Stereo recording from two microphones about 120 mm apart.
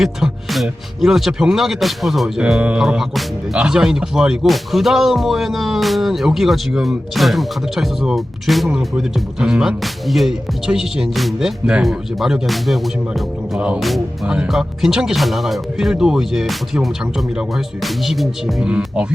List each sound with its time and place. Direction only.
0.0 s speech: centre (ahead or behind)